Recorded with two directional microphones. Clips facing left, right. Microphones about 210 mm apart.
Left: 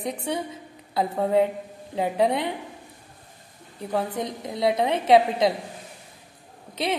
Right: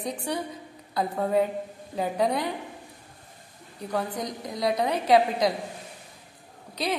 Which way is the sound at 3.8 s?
25° left (ahead or behind).